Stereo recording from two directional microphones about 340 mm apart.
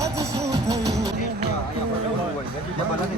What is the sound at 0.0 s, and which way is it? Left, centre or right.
Music, centre.